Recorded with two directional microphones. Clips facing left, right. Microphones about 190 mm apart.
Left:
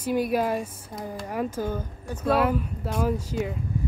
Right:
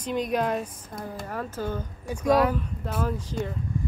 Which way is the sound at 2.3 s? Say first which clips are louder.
Right 1 dB; 5° left (ahead or behind).